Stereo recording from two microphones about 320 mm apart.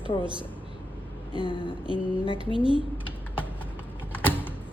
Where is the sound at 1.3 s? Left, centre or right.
Centre.